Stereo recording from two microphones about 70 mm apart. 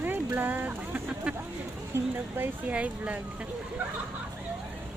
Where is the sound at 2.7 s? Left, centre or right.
Centre.